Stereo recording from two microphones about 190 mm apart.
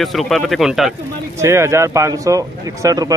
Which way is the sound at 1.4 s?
15° right (ahead or behind).